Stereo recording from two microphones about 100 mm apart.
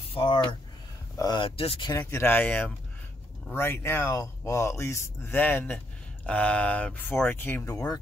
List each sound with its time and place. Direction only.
0.1 s speech: 50° left (ahead or behind)
1.1 s a sound: 40° left (ahead or behind)
1.4 s speech: 65° left (ahead or behind)
2.0 s speech: 25° left (ahead or behind)
7.7 s speech: 35° left (ahead or behind)